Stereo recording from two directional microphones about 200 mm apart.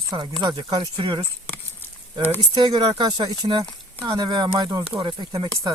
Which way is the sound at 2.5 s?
20° right (ahead or behind).